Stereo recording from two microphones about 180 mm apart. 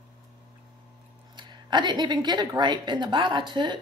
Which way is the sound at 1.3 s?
25° right (ahead or behind).